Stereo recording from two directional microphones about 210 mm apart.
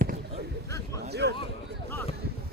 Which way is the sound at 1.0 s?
50° right (ahead or behind).